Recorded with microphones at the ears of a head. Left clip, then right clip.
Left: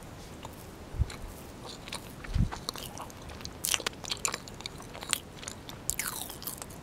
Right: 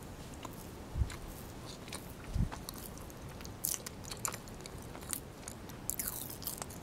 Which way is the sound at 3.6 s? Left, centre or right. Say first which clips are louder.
Left 12 dB; left.